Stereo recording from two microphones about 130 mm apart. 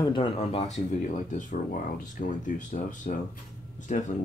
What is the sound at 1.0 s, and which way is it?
Speech, 75° left (ahead or behind).